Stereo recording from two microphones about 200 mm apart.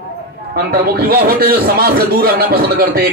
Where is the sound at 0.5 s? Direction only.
50° right (ahead or behind).